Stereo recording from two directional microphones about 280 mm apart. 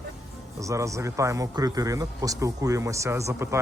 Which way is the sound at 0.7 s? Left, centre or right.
Centre.